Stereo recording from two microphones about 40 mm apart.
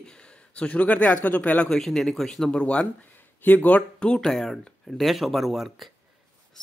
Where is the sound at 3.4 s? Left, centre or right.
Left.